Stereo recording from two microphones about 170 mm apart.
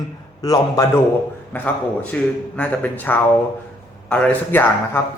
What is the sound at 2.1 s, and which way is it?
A man's voice, 10° left (ahead or behind).